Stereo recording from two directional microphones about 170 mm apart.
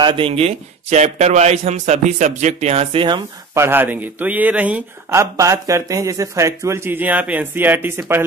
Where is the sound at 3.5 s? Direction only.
15° right (ahead or behind).